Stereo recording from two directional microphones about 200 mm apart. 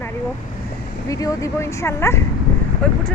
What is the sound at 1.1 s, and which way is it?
Speech, 15° left (ahead or behind).